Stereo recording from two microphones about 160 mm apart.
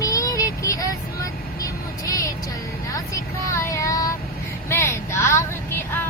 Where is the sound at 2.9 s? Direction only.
20° left (ahead or behind).